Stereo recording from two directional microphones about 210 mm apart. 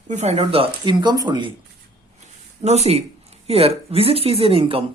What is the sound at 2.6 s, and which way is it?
Speech, 30° right (ahead or behind).